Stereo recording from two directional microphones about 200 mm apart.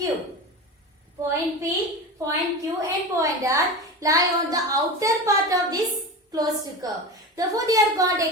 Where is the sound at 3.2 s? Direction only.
15° right (ahead or behind).